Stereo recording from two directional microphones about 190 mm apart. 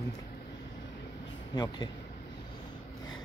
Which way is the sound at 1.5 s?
20° left (ahead or behind).